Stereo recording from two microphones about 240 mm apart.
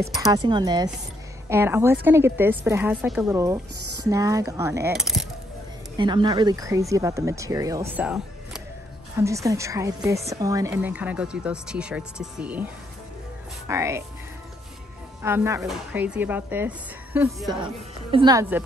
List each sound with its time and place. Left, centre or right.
0.3 s a woman's voice: centre
4.9 s speech: centre
5.9 s a woman's voice: centre
13.7 s a woman's voice: centre
15.2 s a woman's voice: centre